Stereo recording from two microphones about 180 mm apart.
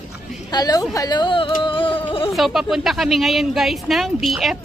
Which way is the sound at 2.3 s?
Centre (ahead or behind).